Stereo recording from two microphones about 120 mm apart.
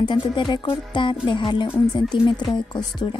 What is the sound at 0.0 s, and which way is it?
Speech, 40° left (ahead or behind).